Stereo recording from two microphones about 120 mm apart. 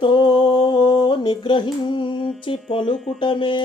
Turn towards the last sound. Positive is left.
turn(degrees=45)  # may be behind; listen again after turning